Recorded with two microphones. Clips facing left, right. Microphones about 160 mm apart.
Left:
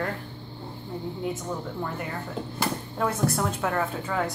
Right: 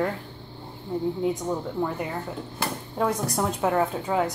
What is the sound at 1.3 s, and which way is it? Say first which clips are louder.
Speech: right 5 dB; 15° right (ahead or behind).